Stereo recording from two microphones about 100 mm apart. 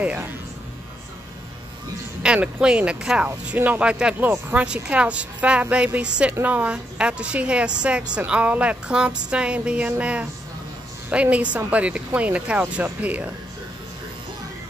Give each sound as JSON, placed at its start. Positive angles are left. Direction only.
{"t": 0.0, "sound": "a woman's voice", "side_deg": -15}
{"t": 2.2, "sound": "a woman's voice", "side_deg": -10}